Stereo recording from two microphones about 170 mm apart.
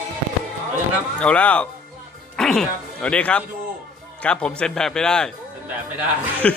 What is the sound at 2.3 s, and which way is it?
A man's voice, 5° left (ahead or behind).